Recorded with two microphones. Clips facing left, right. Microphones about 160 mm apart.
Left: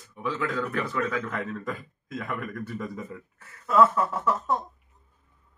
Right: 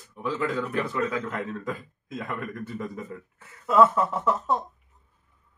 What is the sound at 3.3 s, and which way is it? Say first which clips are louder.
Speech: right 1 dB; 20° right (ahead or behind).